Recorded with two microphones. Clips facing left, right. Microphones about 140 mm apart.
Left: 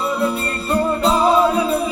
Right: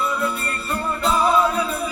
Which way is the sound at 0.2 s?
30° left (ahead or behind).